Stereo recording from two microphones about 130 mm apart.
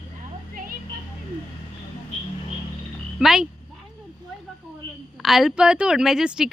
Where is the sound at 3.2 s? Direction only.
5° right (ahead or behind).